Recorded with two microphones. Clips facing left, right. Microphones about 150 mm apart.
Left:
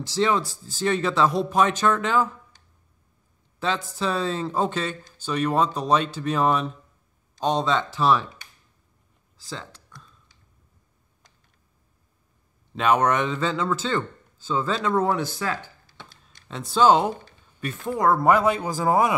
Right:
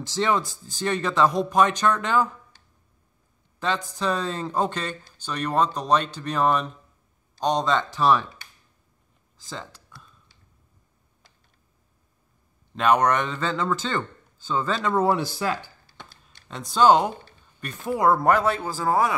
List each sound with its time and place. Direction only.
0.1 s speech: centre (ahead or behind)
3.5 s speech: centre (ahead or behind)
9.5 s speech: centre (ahead or behind)
12.7 s speech: centre (ahead or behind)
15.3 s a sound: 15° right (ahead or behind)
16.1 s a sound: centre (ahead or behind)
17.6 s speech: centre (ahead or behind)
18.3 s a man's voice: 10° left (ahead or behind)